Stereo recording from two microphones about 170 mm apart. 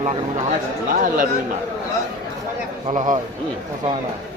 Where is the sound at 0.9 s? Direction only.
55° right (ahead or behind).